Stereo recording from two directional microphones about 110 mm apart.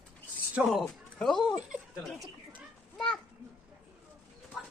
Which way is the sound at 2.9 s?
5° left (ahead or behind).